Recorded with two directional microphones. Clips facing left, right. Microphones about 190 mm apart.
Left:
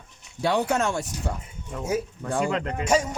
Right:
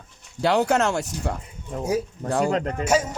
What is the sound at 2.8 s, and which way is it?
Speech, 5° right (ahead or behind).